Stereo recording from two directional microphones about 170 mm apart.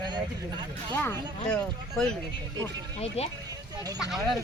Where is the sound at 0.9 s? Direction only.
10° left (ahead or behind).